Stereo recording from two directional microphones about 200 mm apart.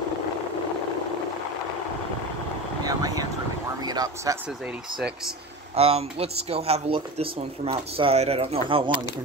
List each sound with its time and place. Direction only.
2.8 s vehicle: 20° right (ahead or behind)
3.8 s speech: 20° right (ahead or behind)
4.9 s speech: centre (ahead or behind)
5.8 s speech: 30° right (ahead or behind)